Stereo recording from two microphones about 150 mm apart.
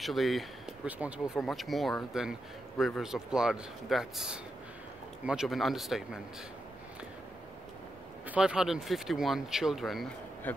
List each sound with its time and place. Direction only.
0.0 s speech: centre (ahead or behind)
8.3 s speech: 5° right (ahead or behind)